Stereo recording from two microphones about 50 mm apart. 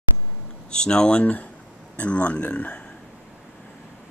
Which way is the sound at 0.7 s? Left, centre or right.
Centre.